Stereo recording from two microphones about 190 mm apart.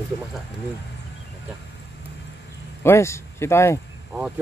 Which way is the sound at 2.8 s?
15° left (ahead or behind).